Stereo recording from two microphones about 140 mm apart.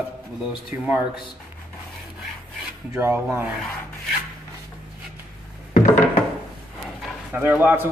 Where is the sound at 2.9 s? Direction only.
15° right (ahead or behind).